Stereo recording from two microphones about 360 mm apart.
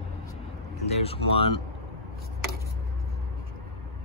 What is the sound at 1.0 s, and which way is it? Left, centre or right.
Speech, centre.